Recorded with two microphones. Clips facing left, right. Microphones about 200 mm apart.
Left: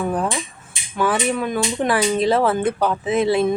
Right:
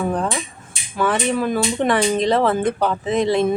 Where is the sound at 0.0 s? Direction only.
5° left (ahead or behind).